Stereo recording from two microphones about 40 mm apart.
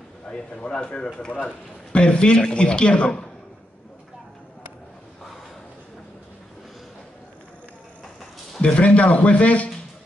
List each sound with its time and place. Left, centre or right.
0.3 s a man's voice: left
8.7 s speech: left